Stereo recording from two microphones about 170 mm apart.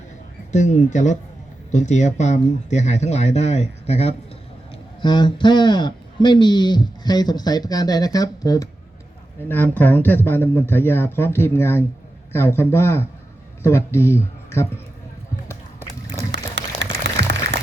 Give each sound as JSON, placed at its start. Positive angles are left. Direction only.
{"t": 0.5, "sound": "speech", "side_deg": 45}
{"t": 5.0, "sound": "speech", "side_deg": 30}
{"t": 9.5, "sound": "speech", "side_deg": 10}
{"t": 16.3, "sound": "a sound", "side_deg": -90}